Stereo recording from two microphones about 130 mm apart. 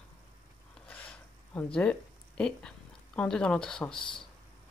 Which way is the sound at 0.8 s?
10° left (ahead or behind).